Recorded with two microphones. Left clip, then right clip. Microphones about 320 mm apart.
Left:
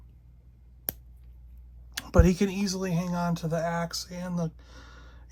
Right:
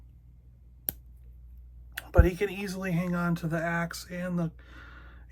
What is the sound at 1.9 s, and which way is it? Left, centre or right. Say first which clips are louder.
Speech: left 2 dB; left.